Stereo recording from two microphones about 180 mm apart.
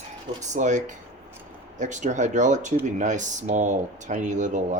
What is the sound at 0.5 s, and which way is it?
Speech, 45° right (ahead or behind).